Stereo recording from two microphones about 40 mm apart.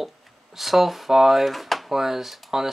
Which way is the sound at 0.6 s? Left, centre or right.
Centre.